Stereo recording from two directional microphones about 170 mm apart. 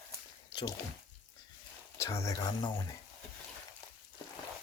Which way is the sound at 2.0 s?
20° left (ahead or behind).